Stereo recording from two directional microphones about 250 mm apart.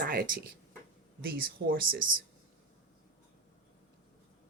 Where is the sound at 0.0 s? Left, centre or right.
Right.